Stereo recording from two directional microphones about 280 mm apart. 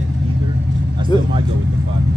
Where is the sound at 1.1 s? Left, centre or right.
Centre.